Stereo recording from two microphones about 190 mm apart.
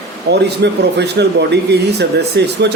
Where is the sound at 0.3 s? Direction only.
60° right (ahead or behind).